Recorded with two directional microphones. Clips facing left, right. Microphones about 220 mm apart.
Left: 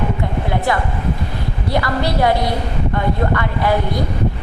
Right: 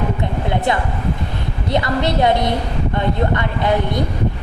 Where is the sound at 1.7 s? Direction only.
20° right (ahead or behind).